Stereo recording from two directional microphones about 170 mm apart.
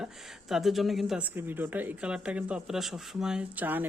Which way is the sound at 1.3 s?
10° right (ahead or behind).